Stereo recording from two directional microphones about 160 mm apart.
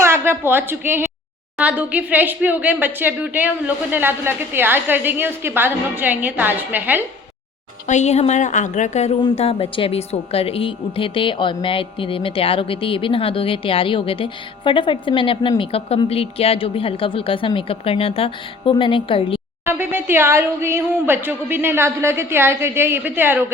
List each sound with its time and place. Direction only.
0.0 s a woman's voice: 15° right (ahead or behind)
7.9 s a woman's voice: 45° left (ahead or behind)
19.6 s speech: 15° right (ahead or behind)